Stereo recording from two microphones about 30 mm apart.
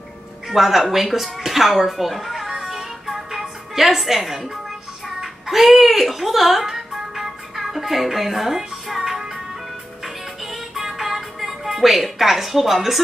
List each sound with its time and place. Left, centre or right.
0.5 s speech: centre
2.4 s music: right
2.7 s music: centre